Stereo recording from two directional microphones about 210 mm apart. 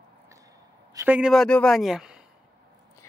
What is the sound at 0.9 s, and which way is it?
A woman's voice, 10° right (ahead or behind).